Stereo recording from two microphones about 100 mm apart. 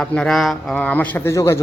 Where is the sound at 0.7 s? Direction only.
15° left (ahead or behind).